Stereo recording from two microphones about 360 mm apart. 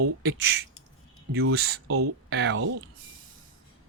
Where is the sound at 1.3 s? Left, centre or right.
Right.